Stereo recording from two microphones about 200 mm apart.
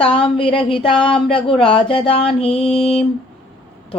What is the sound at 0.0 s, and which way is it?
Mantra, 25° left (ahead or behind).